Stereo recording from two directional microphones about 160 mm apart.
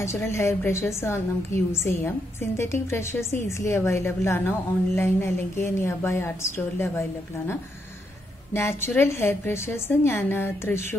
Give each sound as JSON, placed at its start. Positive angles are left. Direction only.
{"t": 0.0, "sound": "a woman's voice", "side_deg": 15}
{"t": 8.5, "sound": "a woman's voice", "side_deg": 15}